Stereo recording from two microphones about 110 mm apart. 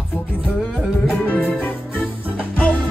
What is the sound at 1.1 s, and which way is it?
Music, 15° left (ahead or behind).